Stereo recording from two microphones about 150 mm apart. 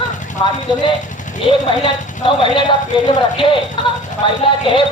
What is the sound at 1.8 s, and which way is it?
Speech, 35° left (ahead or behind).